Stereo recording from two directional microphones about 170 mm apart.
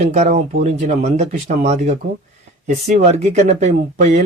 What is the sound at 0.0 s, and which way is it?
Speech, 40° right (ahead or behind).